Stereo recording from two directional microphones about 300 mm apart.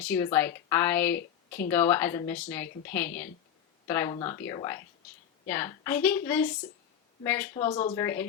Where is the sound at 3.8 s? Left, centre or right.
Centre.